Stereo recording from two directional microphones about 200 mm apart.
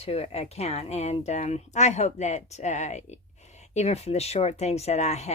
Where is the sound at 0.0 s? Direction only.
30° left (ahead or behind).